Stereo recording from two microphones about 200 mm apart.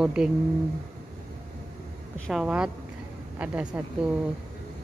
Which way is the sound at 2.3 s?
5° right (ahead or behind).